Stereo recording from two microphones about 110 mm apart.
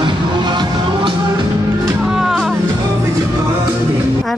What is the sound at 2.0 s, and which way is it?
Music, 5° right (ahead or behind).